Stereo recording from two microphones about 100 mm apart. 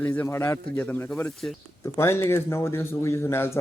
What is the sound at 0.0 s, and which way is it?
Speech, 20° left (ahead or behind).